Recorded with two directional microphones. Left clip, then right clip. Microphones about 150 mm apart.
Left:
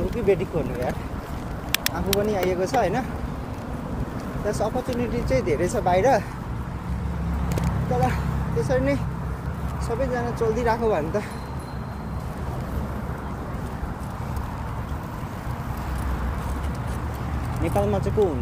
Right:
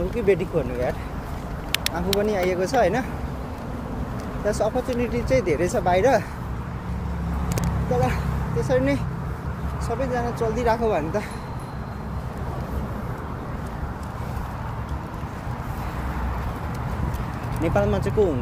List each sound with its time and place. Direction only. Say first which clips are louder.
0.3 s speech: right 1 dB; 45° right (ahead or behind)
2.0 s speech: right 2 dB; 45° right (ahead or behind)
4.5 s speech: right 3 dB; 45° right (ahead or behind)
7.9 s speech: right 1 dB; 30° right (ahead or behind)
17.7 s speech: right 1 dB; 45° right (ahead or behind)